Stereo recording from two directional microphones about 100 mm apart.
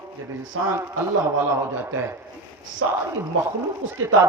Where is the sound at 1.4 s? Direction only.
20° right (ahead or behind).